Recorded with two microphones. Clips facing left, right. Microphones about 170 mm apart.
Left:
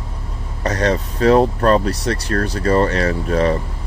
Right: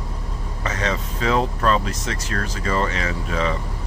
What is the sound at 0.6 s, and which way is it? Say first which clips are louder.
Speech: left 7 dB; 40° left (ahead or behind).